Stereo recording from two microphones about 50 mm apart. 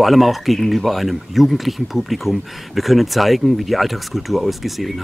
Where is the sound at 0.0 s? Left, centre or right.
Centre.